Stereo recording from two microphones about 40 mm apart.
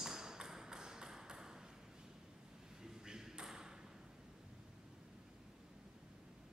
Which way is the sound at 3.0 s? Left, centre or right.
Centre.